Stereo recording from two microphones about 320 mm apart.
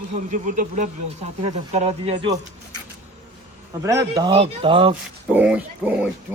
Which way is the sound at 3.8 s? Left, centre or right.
Centre.